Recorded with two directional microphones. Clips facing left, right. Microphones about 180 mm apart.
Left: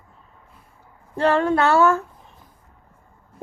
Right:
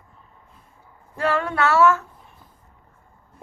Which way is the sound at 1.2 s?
30° left (ahead or behind).